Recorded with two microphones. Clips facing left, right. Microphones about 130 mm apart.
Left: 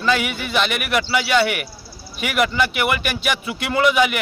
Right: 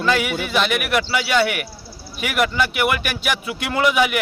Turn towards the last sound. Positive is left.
turn(degrees=-5)  # may be behind; listen again after turning